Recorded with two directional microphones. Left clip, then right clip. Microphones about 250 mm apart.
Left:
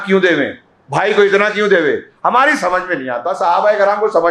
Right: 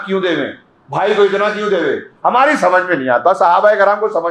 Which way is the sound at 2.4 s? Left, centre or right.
Centre.